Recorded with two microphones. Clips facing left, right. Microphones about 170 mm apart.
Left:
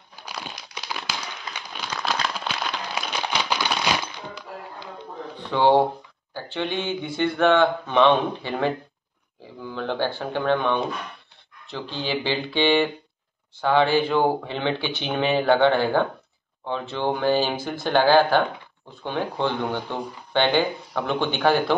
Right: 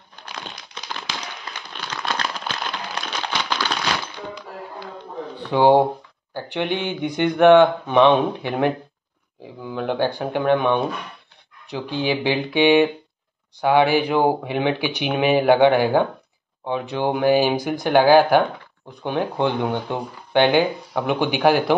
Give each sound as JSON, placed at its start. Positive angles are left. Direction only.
{"t": 0.1, "sound": "a sound", "side_deg": 5}
{"t": 5.5, "sound": "speech", "side_deg": -15}
{"t": 9.8, "sound": "speech", "side_deg": -15}